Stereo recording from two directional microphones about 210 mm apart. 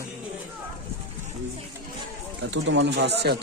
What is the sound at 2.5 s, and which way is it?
Speech, 60° right (ahead or behind).